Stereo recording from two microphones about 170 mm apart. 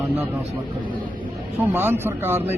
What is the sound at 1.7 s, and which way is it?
Speech, 10° right (ahead or behind).